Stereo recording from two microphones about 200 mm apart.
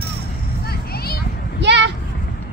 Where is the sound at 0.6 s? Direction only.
50° left (ahead or behind).